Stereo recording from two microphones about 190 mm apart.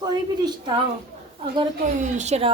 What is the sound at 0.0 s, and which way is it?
Speech, 20° right (ahead or behind).